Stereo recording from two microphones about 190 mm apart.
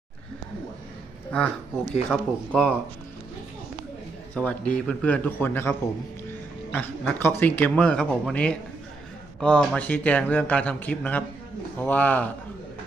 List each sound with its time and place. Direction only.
1.3 s speech: 5° left (ahead or behind)
4.4 s speech: 5° left (ahead or behind)
6.7 s speech: 10° left (ahead or behind)